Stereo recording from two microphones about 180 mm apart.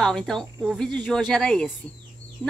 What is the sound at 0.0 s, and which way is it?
A woman's voice, centre (ahead or behind).